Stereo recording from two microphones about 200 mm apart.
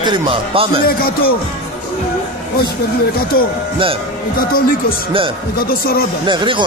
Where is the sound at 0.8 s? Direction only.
50° left (ahead or behind).